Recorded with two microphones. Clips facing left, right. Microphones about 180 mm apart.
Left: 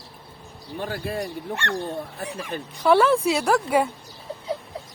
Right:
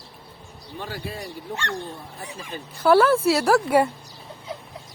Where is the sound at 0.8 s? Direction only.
55° left (ahead or behind).